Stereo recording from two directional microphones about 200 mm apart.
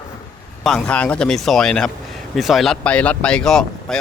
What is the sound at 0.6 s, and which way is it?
A man's voice, centre (ahead or behind).